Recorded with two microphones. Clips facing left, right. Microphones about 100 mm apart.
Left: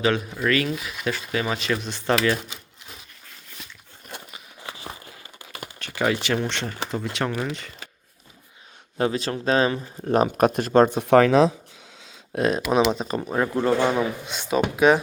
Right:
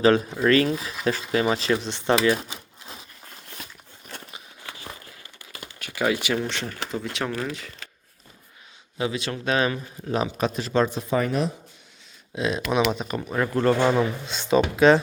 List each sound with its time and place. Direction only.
0.0 s speech: 30° right (ahead or behind)
4.6 s a sound: 25° left (ahead or behind)
5.8 s speech: 10° right (ahead or behind)
9.0 s speech: 40° left (ahead or behind)
10.1 s speech: 50° left (ahead or behind)
10.9 s speech: 70° left (ahead or behind)
12.3 s speech: 45° left (ahead or behind)
12.8 s speech: 30° left (ahead or behind); by 15.0 s 10° left (ahead or behind)